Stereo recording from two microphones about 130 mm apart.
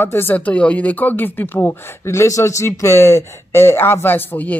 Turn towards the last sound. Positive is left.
turn(degrees=15)  # may be behind; listen again after turning